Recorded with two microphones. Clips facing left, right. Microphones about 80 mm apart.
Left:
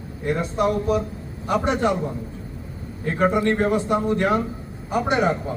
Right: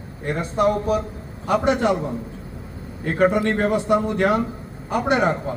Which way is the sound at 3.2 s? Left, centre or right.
Right.